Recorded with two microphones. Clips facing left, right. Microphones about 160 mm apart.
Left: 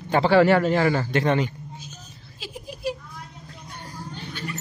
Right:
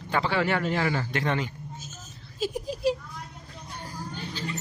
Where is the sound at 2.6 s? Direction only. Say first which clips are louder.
Right 1 dB; 30° right (ahead or behind).